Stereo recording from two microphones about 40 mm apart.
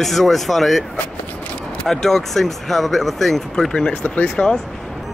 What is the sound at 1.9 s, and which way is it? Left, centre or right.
Speech, centre.